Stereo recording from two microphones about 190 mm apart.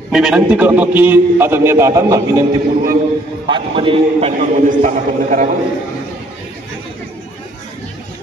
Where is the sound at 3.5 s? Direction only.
25° right (ahead or behind).